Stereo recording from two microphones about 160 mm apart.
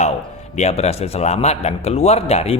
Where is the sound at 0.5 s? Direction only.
45° left (ahead or behind).